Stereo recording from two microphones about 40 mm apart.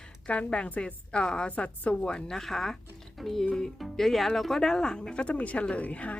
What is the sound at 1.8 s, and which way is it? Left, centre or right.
Speech, left.